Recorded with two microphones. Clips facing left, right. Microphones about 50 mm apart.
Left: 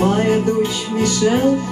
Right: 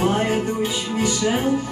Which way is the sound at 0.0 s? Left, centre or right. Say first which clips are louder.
Left 4 dB; centre.